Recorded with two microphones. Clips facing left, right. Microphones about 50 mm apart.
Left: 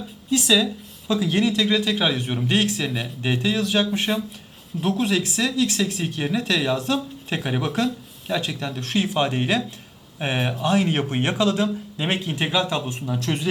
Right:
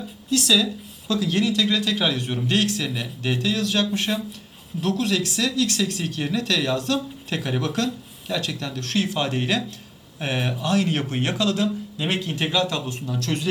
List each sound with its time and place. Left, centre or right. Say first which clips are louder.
0.3 s speech: left 1 dB; centre